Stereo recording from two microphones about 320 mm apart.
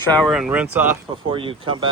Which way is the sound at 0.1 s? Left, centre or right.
Centre.